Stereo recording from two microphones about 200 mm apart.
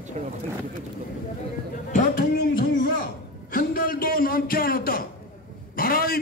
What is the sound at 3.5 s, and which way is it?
A man's voice, 45° left (ahead or behind).